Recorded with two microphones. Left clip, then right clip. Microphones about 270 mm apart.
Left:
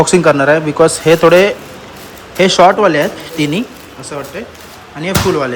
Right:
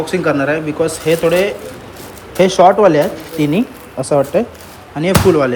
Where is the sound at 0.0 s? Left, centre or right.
Centre.